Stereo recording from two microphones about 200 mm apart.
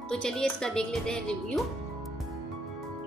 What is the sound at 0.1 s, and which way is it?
Speech, 5° left (ahead or behind).